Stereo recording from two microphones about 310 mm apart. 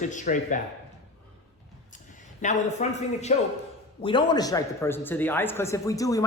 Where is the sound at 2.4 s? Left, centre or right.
Left.